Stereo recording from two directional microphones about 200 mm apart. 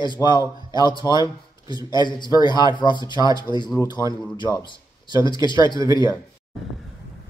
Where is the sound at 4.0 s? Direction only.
15° right (ahead or behind).